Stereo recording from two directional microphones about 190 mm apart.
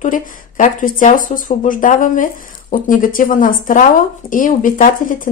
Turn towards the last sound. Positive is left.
turn(degrees=45)  # may be behind; listen again after turning